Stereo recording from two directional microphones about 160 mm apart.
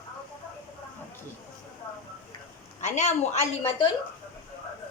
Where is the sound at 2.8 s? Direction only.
45° left (ahead or behind).